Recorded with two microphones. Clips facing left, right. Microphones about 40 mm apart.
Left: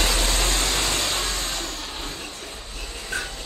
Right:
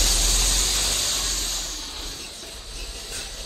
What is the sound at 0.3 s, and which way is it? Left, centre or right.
Vehicle, centre.